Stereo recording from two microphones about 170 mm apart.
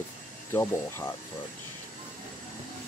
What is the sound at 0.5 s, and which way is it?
Speech, 15° left (ahead or behind).